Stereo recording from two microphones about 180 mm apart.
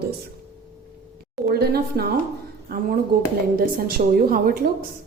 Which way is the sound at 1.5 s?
60° right (ahead or behind).